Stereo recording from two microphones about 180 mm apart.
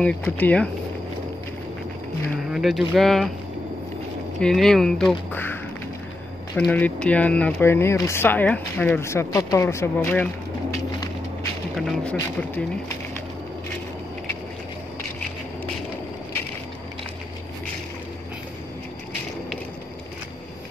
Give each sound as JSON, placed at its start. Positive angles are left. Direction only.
{"t": 0.0, "sound": "speech", "side_deg": 5}
{"t": 2.5, "sound": "speech", "side_deg": 0}
{"t": 4.4, "sound": "speech", "side_deg": 5}
{"t": 6.6, "sound": "speech", "side_deg": 5}
{"t": 11.7, "sound": "speech", "side_deg": 5}